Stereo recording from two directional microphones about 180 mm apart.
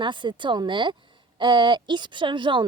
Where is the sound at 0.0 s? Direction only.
25° right (ahead or behind).